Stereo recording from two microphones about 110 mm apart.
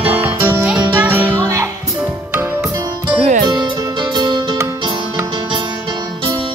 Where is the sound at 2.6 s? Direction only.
30° right (ahead or behind).